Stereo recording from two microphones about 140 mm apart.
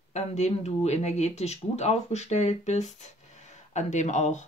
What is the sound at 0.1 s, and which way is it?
Speech, 50° left (ahead or behind).